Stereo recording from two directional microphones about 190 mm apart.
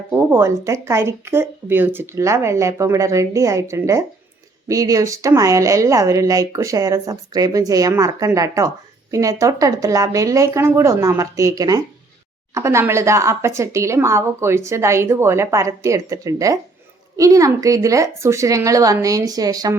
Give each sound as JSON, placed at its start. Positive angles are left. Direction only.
{"t": 0.1, "sound": "speech", "side_deg": -10}